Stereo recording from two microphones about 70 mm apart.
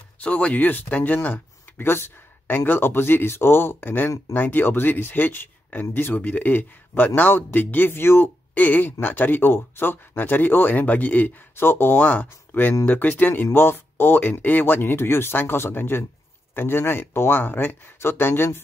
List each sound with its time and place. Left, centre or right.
0.2 s speech: centre